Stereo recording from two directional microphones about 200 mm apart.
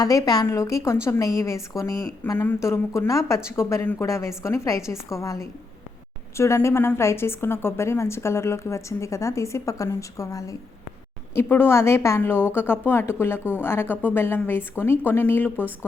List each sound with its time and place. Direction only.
0.0 s a woman's voice: 20° left (ahead or behind)